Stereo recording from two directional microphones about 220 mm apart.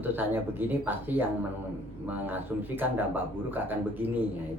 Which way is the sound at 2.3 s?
10° right (ahead or behind).